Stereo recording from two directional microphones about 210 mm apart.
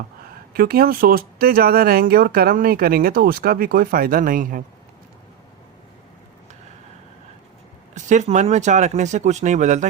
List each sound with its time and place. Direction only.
0.5 s speech: 45° right (ahead or behind)
7.9 s speech: 35° right (ahead or behind)